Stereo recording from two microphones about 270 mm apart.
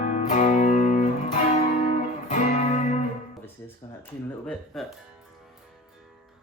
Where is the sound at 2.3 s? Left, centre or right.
Left.